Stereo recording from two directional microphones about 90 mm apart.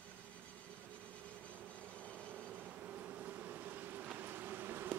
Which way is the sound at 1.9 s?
15° left (ahead or behind).